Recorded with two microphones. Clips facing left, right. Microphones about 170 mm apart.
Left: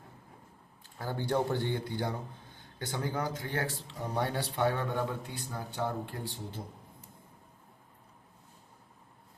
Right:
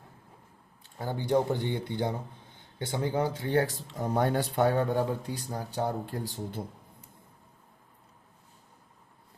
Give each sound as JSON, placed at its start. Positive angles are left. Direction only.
{"t": 0.9, "sound": "speech", "side_deg": -15}